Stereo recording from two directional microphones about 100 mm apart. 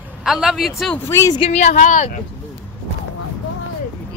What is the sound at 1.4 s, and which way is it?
Speech, 70° left (ahead or behind).